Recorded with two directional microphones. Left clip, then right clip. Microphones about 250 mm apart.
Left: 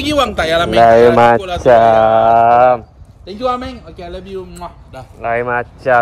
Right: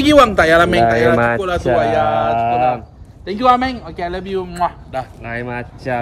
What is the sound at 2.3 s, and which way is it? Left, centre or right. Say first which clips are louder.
A man's voice: left 7 dB; centre.